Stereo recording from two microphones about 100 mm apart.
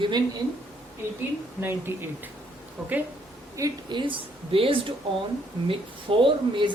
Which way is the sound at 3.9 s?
55° right (ahead or behind).